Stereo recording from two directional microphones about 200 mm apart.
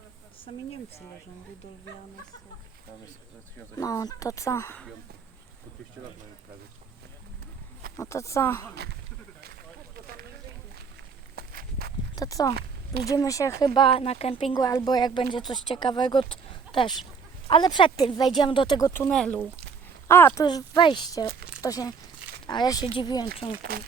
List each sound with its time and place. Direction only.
3.8 s speech: 20° left (ahead or behind)
7.9 s speech: 15° left (ahead or behind)
8.7 s speech: 55° right (ahead or behind)
9.9 s a sound: 50° right (ahead or behind)
11.3 s walk: 50° right (ahead or behind)
12.1 s speech: 20° left (ahead or behind)
12.5 s a sound: 50° right (ahead or behind)
13.1 s speech: 15° left (ahead or behind)
13.7 s speech: 25° left (ahead or behind)
14.5 s speech: 15° left (ahead or behind)
16.3 s a sound: 25° left (ahead or behind)
17.5 s speech: 25° left (ahead or behind)
23.7 s speech: 50° right (ahead or behind)